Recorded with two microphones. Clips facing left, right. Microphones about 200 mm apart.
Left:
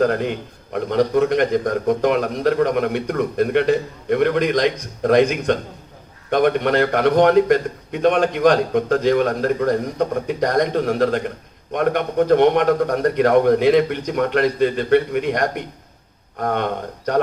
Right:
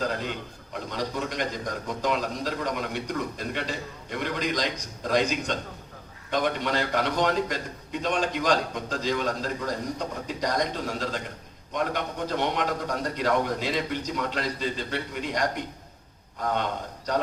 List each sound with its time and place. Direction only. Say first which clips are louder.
0.0 s a man's voice: left 11 dB; 60° left (ahead or behind)